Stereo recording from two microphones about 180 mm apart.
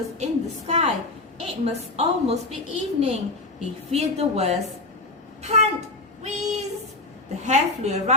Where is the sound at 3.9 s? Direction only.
35° right (ahead or behind).